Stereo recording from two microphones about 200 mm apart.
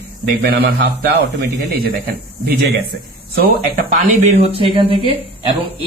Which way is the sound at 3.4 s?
40° right (ahead or behind).